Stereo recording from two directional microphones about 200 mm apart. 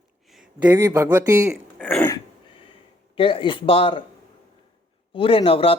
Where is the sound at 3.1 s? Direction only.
25° left (ahead or behind).